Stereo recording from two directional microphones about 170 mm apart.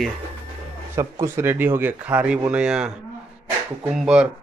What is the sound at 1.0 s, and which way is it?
Speech, 15° right (ahead or behind).